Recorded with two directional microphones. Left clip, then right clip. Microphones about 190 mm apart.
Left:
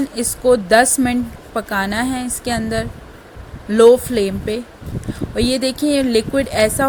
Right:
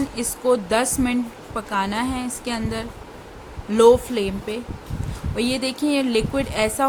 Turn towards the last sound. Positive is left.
turn(degrees=20)  # may be behind; listen again after turning